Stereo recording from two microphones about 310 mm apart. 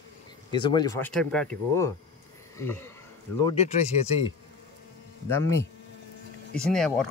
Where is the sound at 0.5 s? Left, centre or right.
Centre.